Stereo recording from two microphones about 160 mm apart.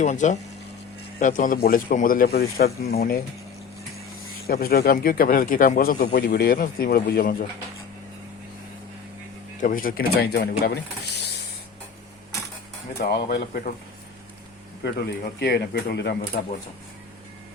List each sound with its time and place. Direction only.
0.0 s a man's voice: 50° left (ahead or behind); by 3.2 s 70° left (ahead or behind)
4.4 s a man's voice: 70° left (ahead or behind)
9.6 s a man's voice: 60° left (ahead or behind); by 11.2 s 85° left
13.0 s speech: 80° left
14.8 s speech: 85° left